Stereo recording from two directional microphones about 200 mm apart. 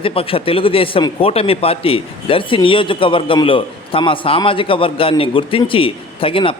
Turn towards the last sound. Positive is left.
turn(degrees=25)  # may be behind; listen again after turning